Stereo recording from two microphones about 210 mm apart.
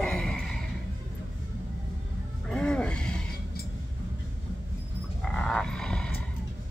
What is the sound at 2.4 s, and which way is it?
Music, 5° left (ahead or behind).